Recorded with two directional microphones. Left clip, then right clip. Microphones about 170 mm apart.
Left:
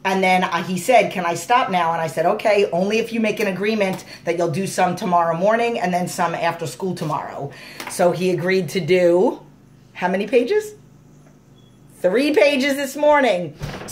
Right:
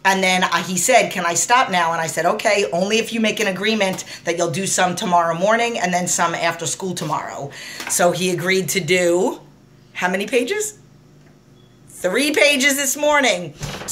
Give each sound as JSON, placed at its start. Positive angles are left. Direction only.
{"t": 0.0, "sound": "a woman's voice", "side_deg": 0}
{"t": 12.0, "sound": "a woman's voice", "side_deg": 30}